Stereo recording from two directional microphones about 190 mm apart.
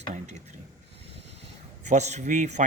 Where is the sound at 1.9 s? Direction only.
40° right (ahead or behind).